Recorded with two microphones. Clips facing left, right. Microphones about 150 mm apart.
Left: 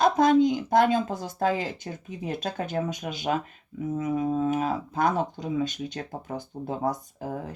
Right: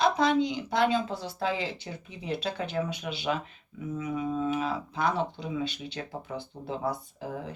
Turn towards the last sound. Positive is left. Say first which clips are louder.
# left 3 dB
turn(degrees=45)  # may be behind; listen again after turning